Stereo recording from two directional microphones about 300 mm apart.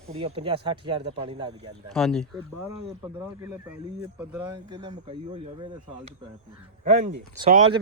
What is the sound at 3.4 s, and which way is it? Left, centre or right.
Speech, centre.